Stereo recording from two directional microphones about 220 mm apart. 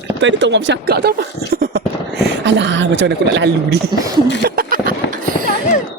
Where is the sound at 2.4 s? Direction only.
55° right (ahead or behind).